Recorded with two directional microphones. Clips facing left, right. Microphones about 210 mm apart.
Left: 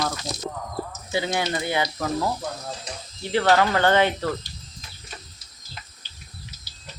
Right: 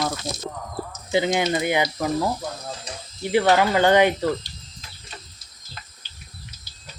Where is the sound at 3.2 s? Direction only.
15° right (ahead or behind).